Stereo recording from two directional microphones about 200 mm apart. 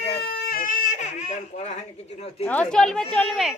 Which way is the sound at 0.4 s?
45° left (ahead or behind).